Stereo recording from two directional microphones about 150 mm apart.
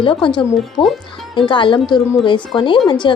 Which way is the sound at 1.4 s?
35° left (ahead or behind).